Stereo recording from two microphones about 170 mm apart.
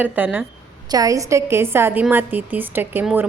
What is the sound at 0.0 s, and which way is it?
Speech, 10° right (ahead or behind).